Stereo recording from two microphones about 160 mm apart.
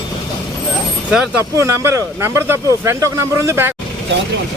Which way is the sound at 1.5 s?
20° right (ahead or behind).